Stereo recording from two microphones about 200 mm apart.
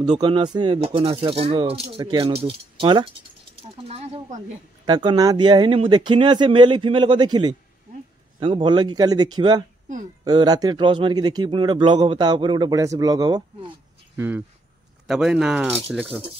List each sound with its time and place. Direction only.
0.0 s a man's voice: 20° right (ahead or behind); by 16.2 s 5° right (ahead or behind)